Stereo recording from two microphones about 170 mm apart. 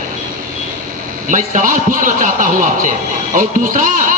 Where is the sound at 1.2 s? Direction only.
50° right (ahead or behind).